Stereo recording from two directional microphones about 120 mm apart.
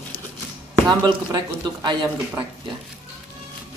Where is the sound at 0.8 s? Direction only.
35° right (ahead or behind).